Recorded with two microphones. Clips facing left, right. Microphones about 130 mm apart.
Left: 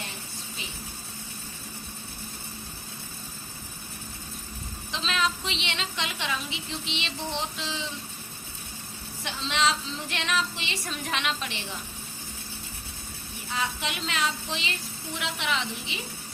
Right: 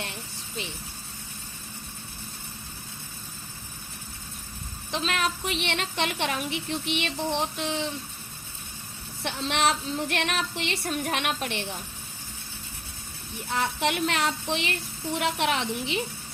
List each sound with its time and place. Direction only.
4.9 s a woman's voice: 55° right (ahead or behind)
9.2 s a woman's voice: 60° right (ahead or behind)
13.5 s a woman's voice: 60° right (ahead or behind)